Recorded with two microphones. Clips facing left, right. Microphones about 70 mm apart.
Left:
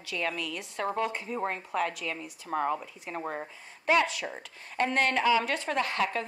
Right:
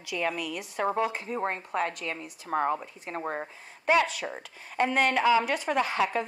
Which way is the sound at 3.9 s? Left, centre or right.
Centre.